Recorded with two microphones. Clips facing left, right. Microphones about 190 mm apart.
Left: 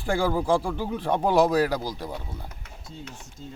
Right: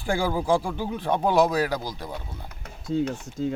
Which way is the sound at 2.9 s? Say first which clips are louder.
Right 17 dB; 90° right.